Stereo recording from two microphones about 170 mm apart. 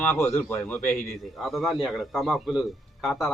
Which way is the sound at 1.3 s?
Centre (ahead or behind).